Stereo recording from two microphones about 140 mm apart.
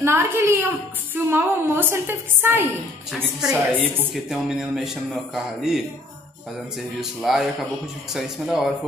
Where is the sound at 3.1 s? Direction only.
5° left (ahead or behind).